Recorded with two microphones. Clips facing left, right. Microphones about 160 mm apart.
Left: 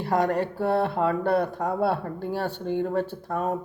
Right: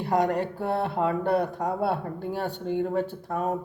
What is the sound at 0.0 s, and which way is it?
Speech, 15° right (ahead or behind).